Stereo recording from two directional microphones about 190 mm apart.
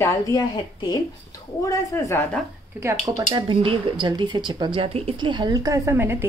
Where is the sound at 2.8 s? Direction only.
15° right (ahead or behind).